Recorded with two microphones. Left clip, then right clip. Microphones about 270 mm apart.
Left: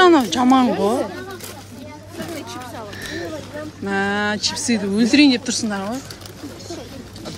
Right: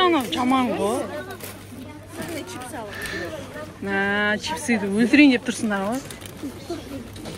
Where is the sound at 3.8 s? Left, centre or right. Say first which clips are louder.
Left 1 dB; centre.